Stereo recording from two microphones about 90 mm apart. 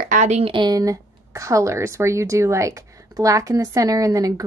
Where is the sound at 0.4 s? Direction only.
70° right (ahead or behind).